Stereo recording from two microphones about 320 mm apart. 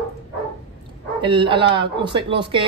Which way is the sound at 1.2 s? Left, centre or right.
Centre.